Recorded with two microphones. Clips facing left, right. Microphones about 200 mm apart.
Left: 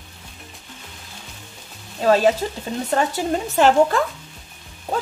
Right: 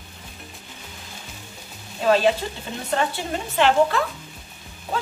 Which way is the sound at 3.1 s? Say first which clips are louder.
Left 6 dB; 45° left (ahead or behind).